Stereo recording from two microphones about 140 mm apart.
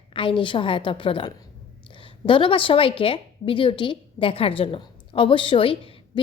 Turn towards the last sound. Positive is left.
turn(degrees=40)  # may be behind; listen again after turning